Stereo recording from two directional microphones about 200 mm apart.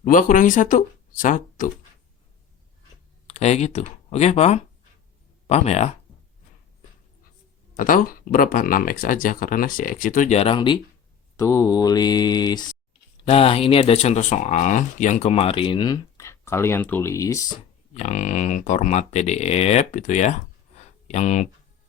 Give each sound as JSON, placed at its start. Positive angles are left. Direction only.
{"t": 0.0, "sound": "speech", "side_deg": 40}
{"t": 3.2, "sound": "speech", "side_deg": 35}
{"t": 7.8, "sound": "speech", "side_deg": 45}
{"t": 17.9, "sound": "speech", "side_deg": 35}